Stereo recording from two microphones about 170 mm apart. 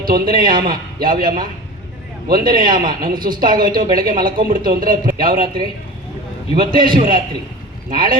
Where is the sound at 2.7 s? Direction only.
55° right (ahead or behind).